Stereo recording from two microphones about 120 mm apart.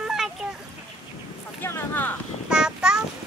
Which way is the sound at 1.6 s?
20° left (ahead or behind).